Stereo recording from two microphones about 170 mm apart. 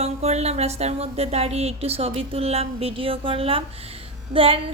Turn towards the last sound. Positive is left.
turn(degrees=-30)  # may be behind; listen again after turning